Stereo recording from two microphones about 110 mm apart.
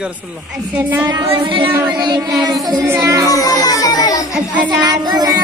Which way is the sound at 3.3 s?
30° left (ahead or behind).